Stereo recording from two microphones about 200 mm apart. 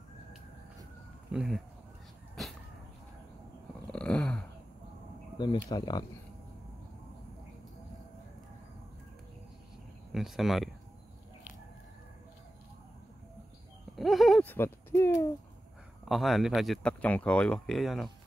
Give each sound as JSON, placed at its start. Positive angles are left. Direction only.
{"t": 1.3, "sound": "speech", "side_deg": -5}
{"t": 3.8, "sound": "a sound", "side_deg": 5}
{"t": 5.4, "sound": "speech", "side_deg": 20}
{"t": 10.1, "sound": "speech", "side_deg": 0}
{"t": 13.9, "sound": "a sound", "side_deg": 0}
{"t": 16.1, "sound": "speech", "side_deg": 0}